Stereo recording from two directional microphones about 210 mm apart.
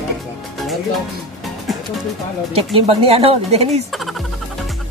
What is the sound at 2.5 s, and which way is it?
Speech, 25° right (ahead or behind).